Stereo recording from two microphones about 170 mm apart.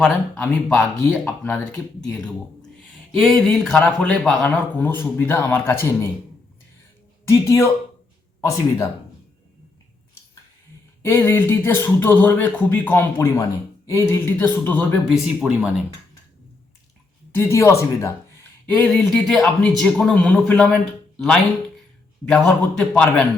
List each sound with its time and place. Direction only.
0.0 s speech: 5° left (ahead or behind)
7.3 s speech: 15° left (ahead or behind)
11.0 s speech: 15° left (ahead or behind)
15.1 s a man's voice: 5° right (ahead or behind)
17.3 s speech: 15° left (ahead or behind)
18.8 s a man's voice: 5° left (ahead or behind)